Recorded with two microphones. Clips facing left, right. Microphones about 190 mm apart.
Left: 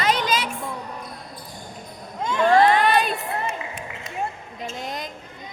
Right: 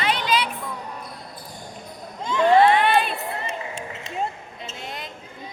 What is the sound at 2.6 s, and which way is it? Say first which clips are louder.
Crowd: even; 40° left (ahead or behind).